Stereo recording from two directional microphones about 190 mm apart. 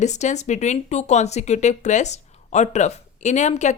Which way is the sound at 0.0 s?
35° left (ahead or behind).